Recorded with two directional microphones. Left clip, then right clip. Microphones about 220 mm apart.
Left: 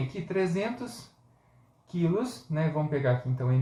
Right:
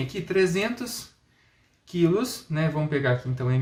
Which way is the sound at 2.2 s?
45° right (ahead or behind).